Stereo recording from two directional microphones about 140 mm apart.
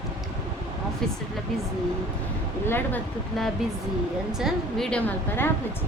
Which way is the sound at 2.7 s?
15° left (ahead or behind).